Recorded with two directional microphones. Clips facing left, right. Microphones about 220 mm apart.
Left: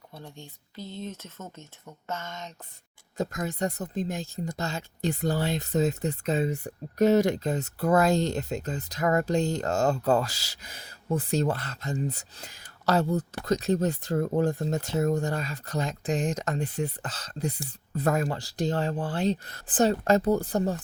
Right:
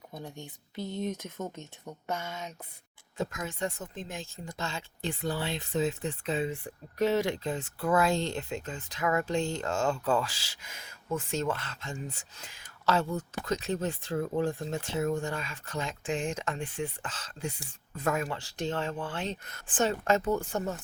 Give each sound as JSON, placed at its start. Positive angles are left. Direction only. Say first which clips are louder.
{"t": 0.1, "sound": "speech", "louder": "right 2 dB", "side_deg": -15}
{"t": 3.2, "sound": "speech", "louder": "left 4 dB", "side_deg": 40}